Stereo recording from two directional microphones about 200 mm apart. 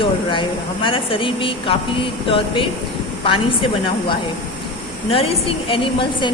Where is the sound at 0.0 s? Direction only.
25° left (ahead or behind).